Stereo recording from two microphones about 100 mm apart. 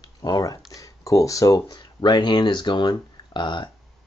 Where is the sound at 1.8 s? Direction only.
50° left (ahead or behind).